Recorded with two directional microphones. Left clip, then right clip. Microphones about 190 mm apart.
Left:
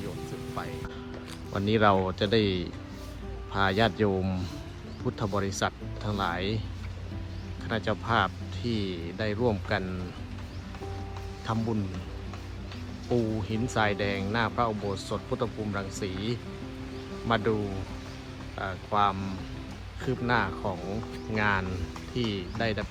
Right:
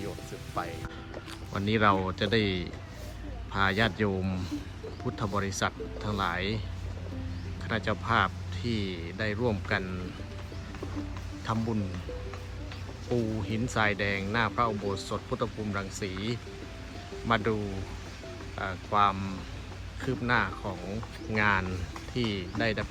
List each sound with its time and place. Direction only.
1.5 s speech: 20° left (ahead or behind)
7.7 s speech: 15° left (ahead or behind)
11.5 s speech: 15° left (ahead or behind)
13.1 s speech: 15° left (ahead or behind)
18.5 s speech: 15° left (ahead or behind)